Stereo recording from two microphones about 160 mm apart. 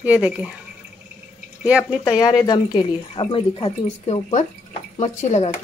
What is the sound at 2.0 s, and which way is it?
Speech, 20° left (ahead or behind).